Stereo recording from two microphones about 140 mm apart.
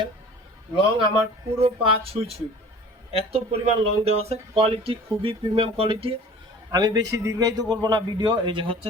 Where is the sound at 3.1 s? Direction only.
45° right (ahead or behind).